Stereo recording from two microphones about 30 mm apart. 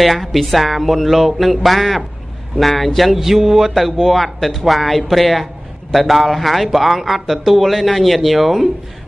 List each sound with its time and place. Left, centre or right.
0.0 s speech: centre